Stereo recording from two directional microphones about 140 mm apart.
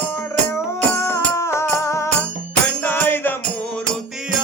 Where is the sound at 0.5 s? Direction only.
15° left (ahead or behind).